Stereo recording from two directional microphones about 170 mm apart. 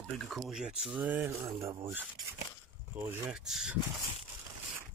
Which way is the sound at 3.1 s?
5° right (ahead or behind).